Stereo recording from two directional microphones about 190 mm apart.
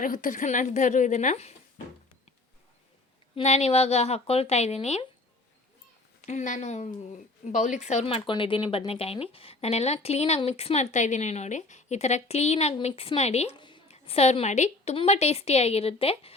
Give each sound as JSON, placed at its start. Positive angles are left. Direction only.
{"t": 0.0, "sound": "a woman's voice", "side_deg": 45}
{"t": 3.3, "sound": "a woman's voice", "side_deg": 35}
{"t": 6.2, "sound": "a woman's voice", "side_deg": 40}